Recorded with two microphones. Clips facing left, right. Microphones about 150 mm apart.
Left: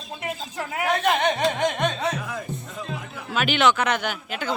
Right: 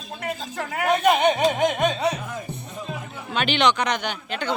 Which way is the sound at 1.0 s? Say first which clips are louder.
Right 4 dB; 10° right (ahead or behind).